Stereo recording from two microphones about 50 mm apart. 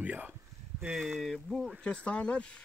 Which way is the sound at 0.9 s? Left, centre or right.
Centre.